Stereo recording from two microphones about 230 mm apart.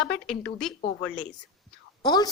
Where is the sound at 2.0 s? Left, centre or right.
Centre.